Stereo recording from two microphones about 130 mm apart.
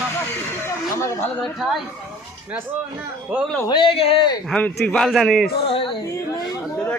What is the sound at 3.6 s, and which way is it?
Speech, 40° left (ahead or behind).